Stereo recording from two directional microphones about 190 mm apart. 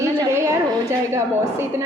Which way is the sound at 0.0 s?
15° right (ahead or behind).